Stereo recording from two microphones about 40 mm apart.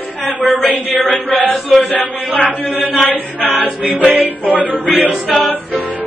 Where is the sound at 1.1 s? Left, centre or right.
Left.